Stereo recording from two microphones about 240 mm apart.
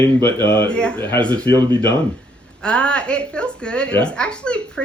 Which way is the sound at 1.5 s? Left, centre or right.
Centre.